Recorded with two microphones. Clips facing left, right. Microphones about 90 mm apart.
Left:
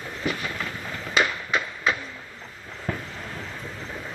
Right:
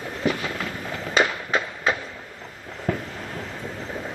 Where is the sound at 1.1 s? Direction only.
30° right (ahead or behind).